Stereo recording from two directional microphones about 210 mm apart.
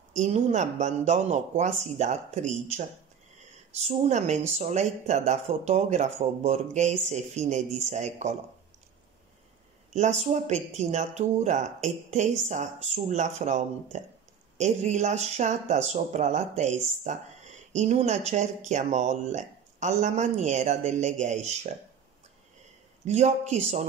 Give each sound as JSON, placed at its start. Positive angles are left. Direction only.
{"t": 0.1, "sound": "speech", "side_deg": -35}
{"t": 3.8, "sound": "speech", "side_deg": -30}
{"t": 9.9, "sound": "speech", "side_deg": -35}
{"t": 23.0, "sound": "speech", "side_deg": -35}